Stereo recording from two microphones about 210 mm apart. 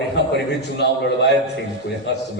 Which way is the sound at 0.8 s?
55° left (ahead or behind).